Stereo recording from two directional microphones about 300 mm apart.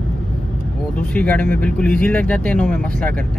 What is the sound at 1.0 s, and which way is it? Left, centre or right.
Speech, centre.